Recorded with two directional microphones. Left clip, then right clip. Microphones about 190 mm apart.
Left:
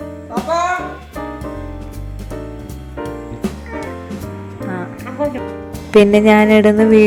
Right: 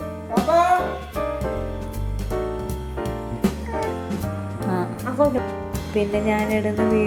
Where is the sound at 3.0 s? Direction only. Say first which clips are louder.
Left 2 dB; centre (ahead or behind).